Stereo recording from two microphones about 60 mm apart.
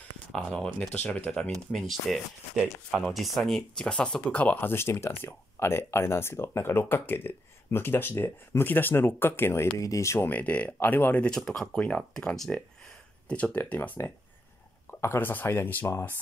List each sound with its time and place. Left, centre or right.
0.7 s speech: left
1.7 s speech: centre; by 4.6 s left
4.6 s speech: left
9.8 s speech: left
10.1 s speech: left
10.4 s speech: left
11.2 s speech: centre
13.7 s speech: left